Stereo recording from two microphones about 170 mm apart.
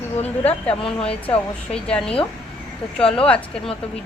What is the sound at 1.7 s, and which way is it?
A woman's voice, 5° left (ahead or behind).